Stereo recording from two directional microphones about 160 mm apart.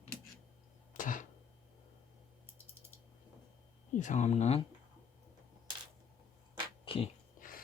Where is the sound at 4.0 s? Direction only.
50° left (ahead or behind).